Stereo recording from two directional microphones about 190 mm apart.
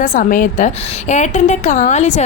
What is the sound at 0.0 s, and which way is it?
A woman's voice, 45° left (ahead or behind).